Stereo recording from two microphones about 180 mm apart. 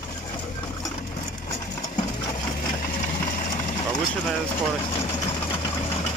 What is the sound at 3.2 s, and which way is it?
Vehicle, 45° left (ahead or behind).